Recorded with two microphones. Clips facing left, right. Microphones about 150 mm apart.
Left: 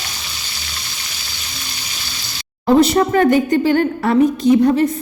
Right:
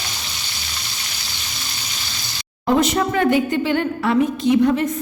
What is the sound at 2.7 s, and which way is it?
A woman's voice, 35° left (ahead or behind).